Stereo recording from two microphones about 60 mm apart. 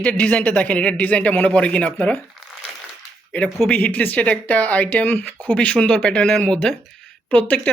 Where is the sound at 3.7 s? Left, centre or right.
Left.